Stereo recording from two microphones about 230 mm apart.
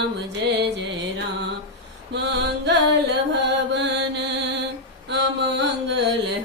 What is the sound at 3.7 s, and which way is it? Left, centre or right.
Chant, right.